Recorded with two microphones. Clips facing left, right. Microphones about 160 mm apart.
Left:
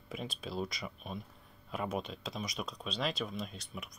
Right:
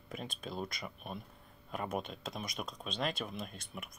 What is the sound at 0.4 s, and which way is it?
Speech, 5° left (ahead or behind).